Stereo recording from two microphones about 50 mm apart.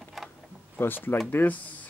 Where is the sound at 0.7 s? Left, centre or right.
Left.